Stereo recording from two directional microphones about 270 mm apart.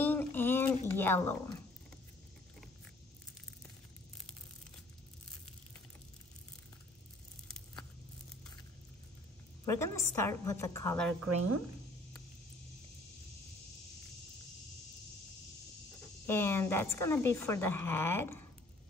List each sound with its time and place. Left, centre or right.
0.0 s a sound: centre
9.7 s a woman's voice: centre
11.2 s speech: right
16.3 s a woman's voice: centre